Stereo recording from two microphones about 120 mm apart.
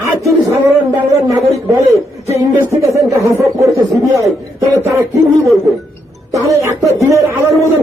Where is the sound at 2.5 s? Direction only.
25° right (ahead or behind).